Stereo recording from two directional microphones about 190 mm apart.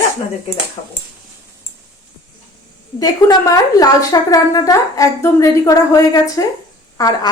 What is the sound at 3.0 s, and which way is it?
A woman's voice, 20° left (ahead or behind).